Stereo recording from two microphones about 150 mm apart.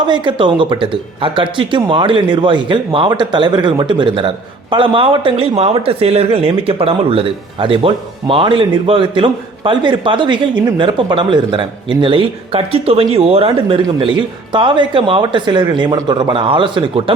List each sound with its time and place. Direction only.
0.1 s speech: 30° right (ahead or behind)